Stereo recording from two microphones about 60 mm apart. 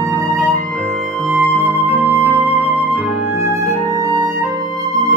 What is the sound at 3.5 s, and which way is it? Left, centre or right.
Flute, right.